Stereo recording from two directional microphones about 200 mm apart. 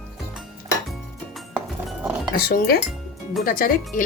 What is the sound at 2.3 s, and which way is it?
Speech, 45° left (ahead or behind).